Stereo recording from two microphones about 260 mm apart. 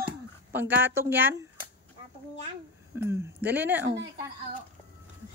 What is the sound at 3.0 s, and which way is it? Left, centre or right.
Speech, centre.